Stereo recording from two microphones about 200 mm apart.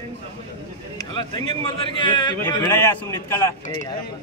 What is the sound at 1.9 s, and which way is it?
Speech, 25° left (ahead or behind).